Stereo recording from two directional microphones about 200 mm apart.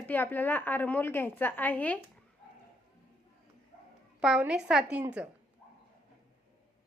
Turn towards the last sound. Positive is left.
turn(degrees=-5)  # may be behind; listen again after turning